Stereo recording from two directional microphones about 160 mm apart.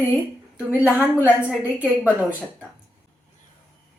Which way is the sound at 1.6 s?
10° right (ahead or behind).